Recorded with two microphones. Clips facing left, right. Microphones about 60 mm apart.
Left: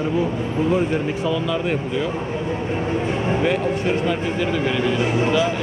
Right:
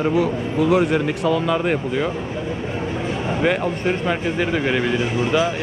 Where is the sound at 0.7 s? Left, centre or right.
Right.